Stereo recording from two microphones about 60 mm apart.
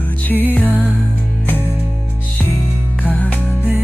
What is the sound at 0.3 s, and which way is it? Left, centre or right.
Music, left.